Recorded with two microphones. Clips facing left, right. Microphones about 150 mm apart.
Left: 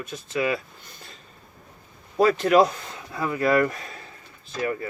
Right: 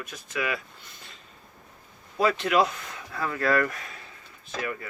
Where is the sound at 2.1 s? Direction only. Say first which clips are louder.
Left 5 dB; 40° left (ahead or behind).